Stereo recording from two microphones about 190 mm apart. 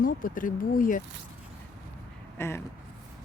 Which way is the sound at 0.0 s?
45° left (ahead or behind).